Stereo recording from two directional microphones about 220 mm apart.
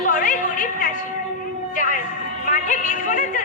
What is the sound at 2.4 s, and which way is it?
A woman's voice, 35° left (ahead or behind).